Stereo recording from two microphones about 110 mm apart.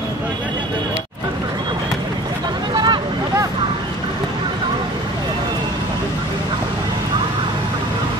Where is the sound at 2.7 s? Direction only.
45° right (ahead or behind).